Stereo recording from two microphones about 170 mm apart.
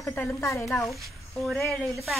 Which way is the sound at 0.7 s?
Centre (ahead or behind).